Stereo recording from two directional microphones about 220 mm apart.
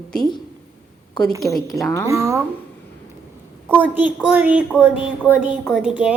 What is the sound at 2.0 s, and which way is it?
Speech, 15° right (ahead or behind).